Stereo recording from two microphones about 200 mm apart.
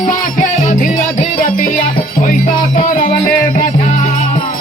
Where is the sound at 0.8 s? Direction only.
40° left (ahead or behind).